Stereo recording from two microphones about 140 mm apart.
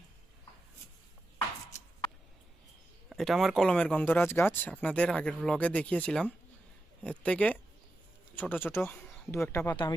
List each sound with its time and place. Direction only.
3.1 s speech: centre (ahead or behind); by 9.7 s 20° left (ahead or behind)